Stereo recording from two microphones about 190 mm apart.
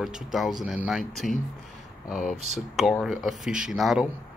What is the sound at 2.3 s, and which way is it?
Speech, 35° right (ahead or behind).